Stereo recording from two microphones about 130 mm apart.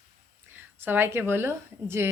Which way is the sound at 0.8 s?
15° right (ahead or behind).